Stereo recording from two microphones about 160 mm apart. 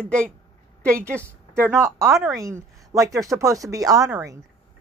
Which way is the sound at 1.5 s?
15° right (ahead or behind).